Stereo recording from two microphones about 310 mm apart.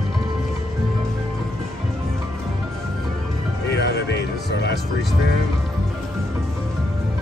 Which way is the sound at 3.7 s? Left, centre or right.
Left.